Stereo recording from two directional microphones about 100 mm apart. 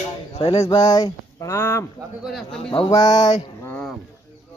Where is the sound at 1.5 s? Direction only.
25° left (ahead or behind).